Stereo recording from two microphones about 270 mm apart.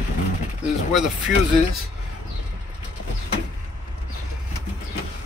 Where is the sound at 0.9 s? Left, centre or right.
Centre.